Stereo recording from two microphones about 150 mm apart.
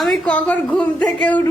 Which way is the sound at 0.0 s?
Centre (ahead or behind).